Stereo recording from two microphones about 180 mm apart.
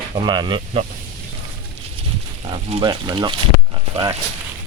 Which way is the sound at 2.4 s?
30° right (ahead or behind).